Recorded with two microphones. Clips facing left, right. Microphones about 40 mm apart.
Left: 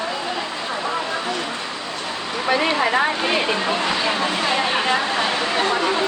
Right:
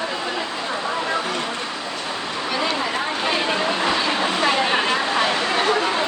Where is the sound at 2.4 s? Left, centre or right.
Left.